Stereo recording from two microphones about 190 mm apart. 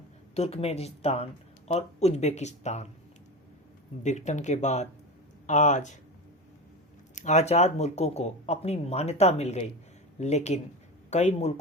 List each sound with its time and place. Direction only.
0.3 s speech: 35° left (ahead or behind)
4.0 s speech: 40° left (ahead or behind)
7.2 s speech: 40° left (ahead or behind)